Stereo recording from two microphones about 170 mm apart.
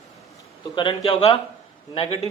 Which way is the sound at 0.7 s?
30° left (ahead or behind).